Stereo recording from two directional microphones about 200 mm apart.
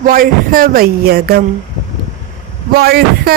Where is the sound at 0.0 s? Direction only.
45° right (ahead or behind).